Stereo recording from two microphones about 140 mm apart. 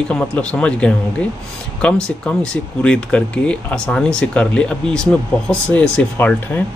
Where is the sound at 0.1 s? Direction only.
10° left (ahead or behind).